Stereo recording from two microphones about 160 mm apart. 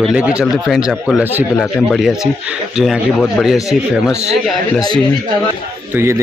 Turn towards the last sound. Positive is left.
turn(degrees=-15)  # may be behind; listen again after turning